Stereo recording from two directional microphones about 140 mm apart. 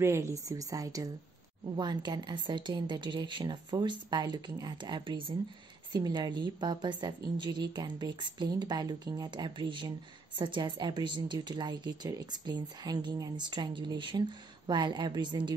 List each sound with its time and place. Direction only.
0.0 s a woman's voice: 20° right (ahead or behind)